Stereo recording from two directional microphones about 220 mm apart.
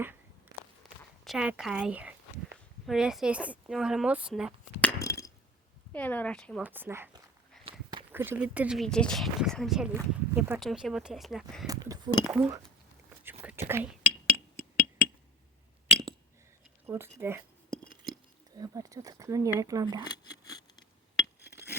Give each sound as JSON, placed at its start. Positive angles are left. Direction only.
{"t": 1.2, "sound": "speech", "side_deg": 0}
{"t": 4.9, "sound": "a sound", "side_deg": 15}
{"t": 5.9, "sound": "speech", "side_deg": 5}
{"t": 6.6, "sound": "speech", "side_deg": -10}
{"t": 7.6, "sound": "a sound", "side_deg": -25}
{"t": 8.1, "sound": "speech", "side_deg": -10}
{"t": 11.6, "sound": "chink", "side_deg": -15}
{"t": 12.2, "sound": "speech", "side_deg": -5}
{"t": 13.4, "sound": "whispering", "side_deg": -10}
{"t": 16.8, "sound": "speech", "side_deg": -10}
{"t": 18.5, "sound": "speech", "side_deg": -15}
{"t": 20.1, "sound": "scissors", "side_deg": 15}